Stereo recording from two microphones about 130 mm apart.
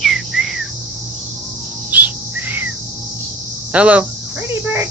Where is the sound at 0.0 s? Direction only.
Centre (ahead or behind).